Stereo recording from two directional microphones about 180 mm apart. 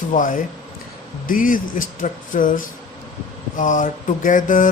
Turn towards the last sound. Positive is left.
turn(degrees=45)  # may be behind; listen again after turning